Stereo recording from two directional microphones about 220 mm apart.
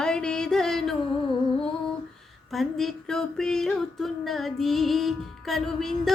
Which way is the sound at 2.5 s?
Centre (ahead or behind).